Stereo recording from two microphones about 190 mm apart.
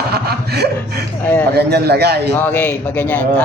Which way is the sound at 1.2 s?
10° left (ahead or behind).